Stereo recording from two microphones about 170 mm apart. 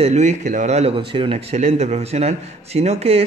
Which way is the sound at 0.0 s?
45° right (ahead or behind).